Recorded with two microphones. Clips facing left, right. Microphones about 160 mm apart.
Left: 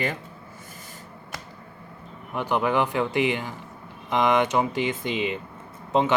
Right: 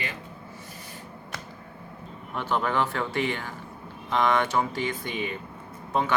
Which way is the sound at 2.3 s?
15° left (ahead or behind).